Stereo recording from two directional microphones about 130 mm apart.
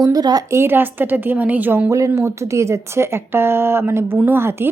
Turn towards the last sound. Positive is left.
turn(degrees=-20)  # may be behind; listen again after turning